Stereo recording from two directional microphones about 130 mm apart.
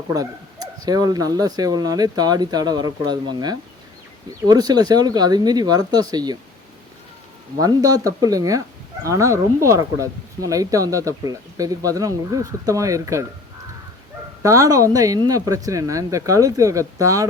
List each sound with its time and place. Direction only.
0.1 s speech: 30° right (ahead or behind)
7.6 s speech: 30° right (ahead or behind)
14.4 s speech: 25° right (ahead or behind)